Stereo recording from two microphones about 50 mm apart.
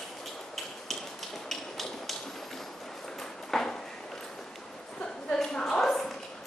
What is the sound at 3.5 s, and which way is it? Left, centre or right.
Ping, centre.